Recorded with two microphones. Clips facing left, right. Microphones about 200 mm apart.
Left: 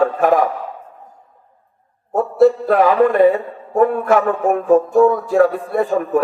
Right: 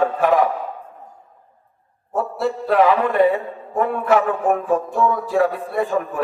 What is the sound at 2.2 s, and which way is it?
Speech, 45° left (ahead or behind).